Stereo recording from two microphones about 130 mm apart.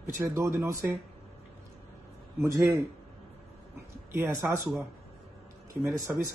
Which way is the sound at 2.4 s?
25° right (ahead or behind).